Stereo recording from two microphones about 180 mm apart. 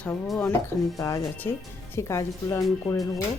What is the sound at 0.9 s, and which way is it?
Speech, 20° left (ahead or behind).